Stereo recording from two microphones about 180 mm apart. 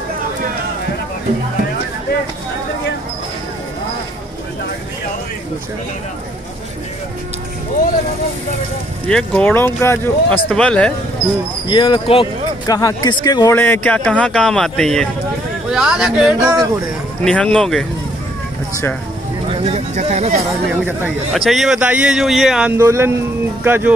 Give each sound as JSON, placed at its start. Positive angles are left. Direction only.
{"t": 9.0, "sound": "speech", "side_deg": 5}
{"t": 11.6, "sound": "a man's voice", "side_deg": 25}
{"t": 16.4, "sound": "speech", "side_deg": -20}
{"t": 17.2, "sound": "a man's voice", "side_deg": 5}
{"t": 19.5, "sound": "speech", "side_deg": -35}
{"t": 20.8, "sound": "a man's voice", "side_deg": -5}